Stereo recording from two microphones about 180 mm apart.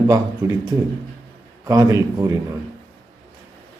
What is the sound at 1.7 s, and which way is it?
Speech, 15° right (ahead or behind).